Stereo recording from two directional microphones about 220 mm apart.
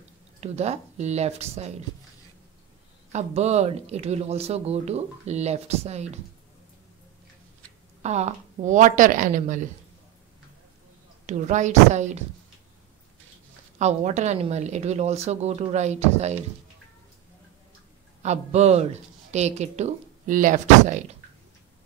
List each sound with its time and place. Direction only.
0.4 s speech: 30° right (ahead or behind)
3.1 s speech: 30° right (ahead or behind)
8.0 s speech: 30° right (ahead or behind)
11.2 s speech: 35° right (ahead or behind)
13.7 s speech: 30° right (ahead or behind)
18.2 s speech: 30° right (ahead or behind)